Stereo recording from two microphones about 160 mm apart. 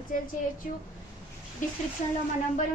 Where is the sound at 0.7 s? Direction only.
55° left (ahead or behind).